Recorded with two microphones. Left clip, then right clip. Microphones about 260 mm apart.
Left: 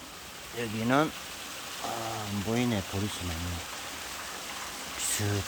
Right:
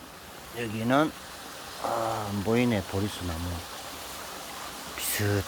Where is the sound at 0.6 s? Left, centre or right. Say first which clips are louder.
Right 2 dB; centre.